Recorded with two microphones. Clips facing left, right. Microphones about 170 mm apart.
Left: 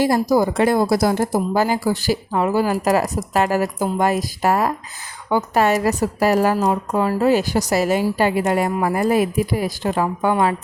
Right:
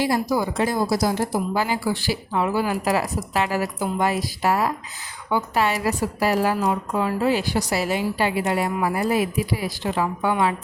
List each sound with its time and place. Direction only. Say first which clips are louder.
0.0 s a woman's voice: left 5 dB; 45° left (ahead or behind)
0.5 s a woman's voice: left 5 dB; 60° left (ahead or behind)